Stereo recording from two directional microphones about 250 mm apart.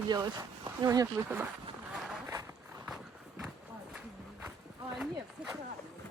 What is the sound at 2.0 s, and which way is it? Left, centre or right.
Run, centre.